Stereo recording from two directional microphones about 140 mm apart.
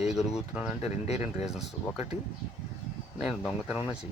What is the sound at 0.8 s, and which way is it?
Speech, 50° left (ahead or behind).